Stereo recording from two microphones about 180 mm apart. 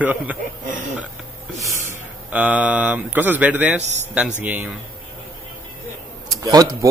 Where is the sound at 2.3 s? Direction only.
10° right (ahead or behind).